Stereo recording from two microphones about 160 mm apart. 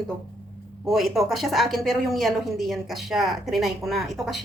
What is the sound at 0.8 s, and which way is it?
Speech, centre (ahead or behind).